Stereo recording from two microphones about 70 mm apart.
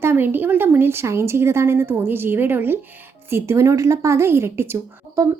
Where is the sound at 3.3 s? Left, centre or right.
Right.